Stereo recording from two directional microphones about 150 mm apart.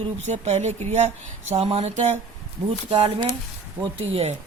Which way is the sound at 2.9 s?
35° right (ahead or behind).